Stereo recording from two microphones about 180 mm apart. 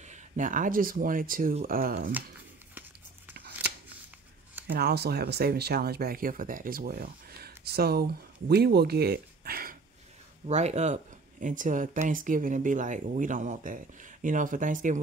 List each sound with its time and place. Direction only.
0.0 s speech: 45° right (ahead or behind)
4.6 s speech: 60° right (ahead or behind)
10.4 s speech: 35° right (ahead or behind)